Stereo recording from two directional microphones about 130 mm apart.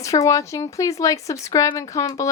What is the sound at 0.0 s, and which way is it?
Speech, 25° left (ahead or behind).